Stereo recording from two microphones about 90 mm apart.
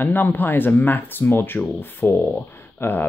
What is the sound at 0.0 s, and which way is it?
Speech, 25° left (ahead or behind).